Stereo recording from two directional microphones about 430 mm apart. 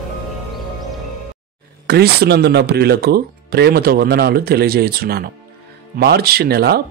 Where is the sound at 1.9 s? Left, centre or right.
Right.